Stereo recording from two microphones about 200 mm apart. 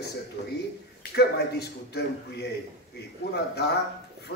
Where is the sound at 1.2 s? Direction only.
55° left (ahead or behind).